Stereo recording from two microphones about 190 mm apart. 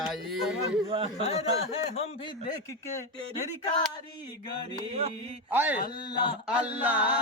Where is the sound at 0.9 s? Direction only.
30° right (ahead or behind).